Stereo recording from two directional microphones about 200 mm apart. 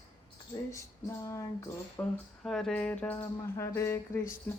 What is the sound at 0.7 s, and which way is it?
Speech, 15° left (ahead or behind).